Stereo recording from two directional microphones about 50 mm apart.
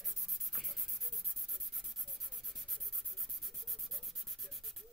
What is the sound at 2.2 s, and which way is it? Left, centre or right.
Rub, centre.